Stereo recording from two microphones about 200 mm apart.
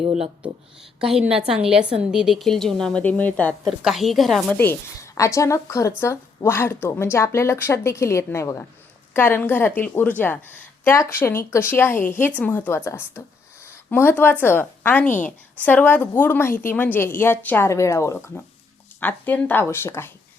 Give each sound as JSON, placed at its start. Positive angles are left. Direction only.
{"t": 0.0, "sound": "speech", "side_deg": -30}
{"t": 0.9, "sound": "a woman's voice", "side_deg": -5}